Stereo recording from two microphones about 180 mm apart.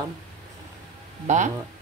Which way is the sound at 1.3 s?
40° right (ahead or behind).